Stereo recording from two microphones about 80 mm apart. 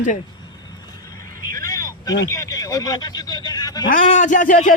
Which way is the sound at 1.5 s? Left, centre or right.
Left.